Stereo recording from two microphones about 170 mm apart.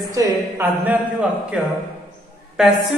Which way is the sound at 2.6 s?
5° right (ahead or behind).